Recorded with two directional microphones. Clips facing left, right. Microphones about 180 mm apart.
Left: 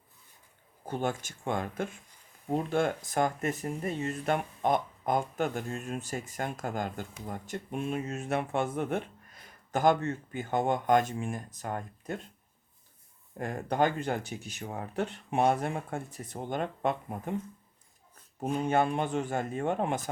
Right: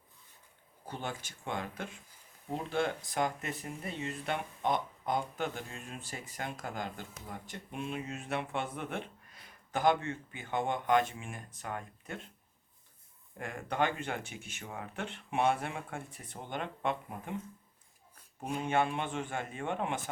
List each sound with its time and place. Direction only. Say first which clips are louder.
0.9 s speech: left 8 dB; 45° left (ahead or behind)
13.4 s speech: left 5 dB; 40° left (ahead or behind)
18.3 s speech: left 4 dB; 40° left (ahead or behind)